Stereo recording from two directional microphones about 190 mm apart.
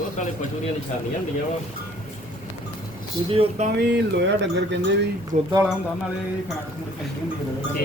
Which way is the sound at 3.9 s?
70° right (ahead or behind).